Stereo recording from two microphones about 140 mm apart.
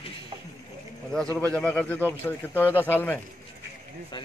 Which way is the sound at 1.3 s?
10° left (ahead or behind).